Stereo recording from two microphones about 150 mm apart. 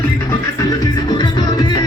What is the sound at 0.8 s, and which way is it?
Music, 25° left (ahead or behind).